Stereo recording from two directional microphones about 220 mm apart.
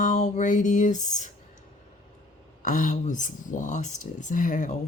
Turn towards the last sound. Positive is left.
turn(degrees=35)  # may be behind; listen again after turning